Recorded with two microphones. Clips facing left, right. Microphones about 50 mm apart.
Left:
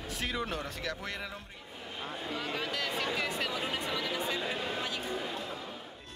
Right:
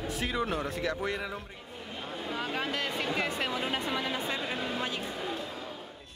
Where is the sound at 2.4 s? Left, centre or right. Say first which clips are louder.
Right 3 dB; right.